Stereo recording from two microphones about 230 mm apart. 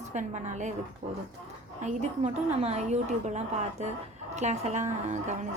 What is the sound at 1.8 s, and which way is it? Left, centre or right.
A woman's voice, right.